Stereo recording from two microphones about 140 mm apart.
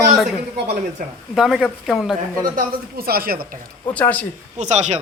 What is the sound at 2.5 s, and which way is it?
Speech, 90° right.